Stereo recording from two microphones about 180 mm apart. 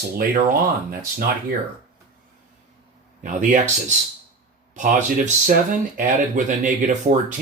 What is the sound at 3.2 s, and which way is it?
Speech, 45° right (ahead or behind).